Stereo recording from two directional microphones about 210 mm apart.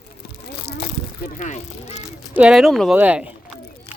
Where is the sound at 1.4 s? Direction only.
35° left (ahead or behind).